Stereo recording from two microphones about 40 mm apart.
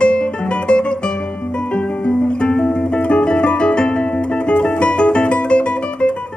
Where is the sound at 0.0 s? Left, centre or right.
Left.